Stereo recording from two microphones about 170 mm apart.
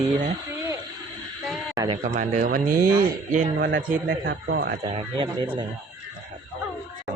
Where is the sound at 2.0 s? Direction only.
45° right (ahead or behind).